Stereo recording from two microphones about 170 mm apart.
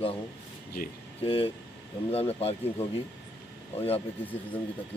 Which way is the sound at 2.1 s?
35° left (ahead or behind).